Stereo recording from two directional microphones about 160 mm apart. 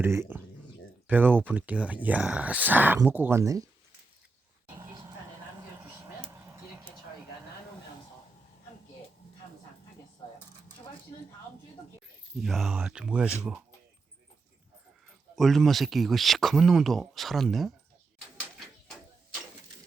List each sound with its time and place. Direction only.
0.0 s speech: 15° right (ahead or behind)
4.7 s a sound: 25° right (ahead or behind)
12.4 s speech: centre (ahead or behind)
15.4 s speech: centre (ahead or behind)
18.3 s bird: centre (ahead or behind)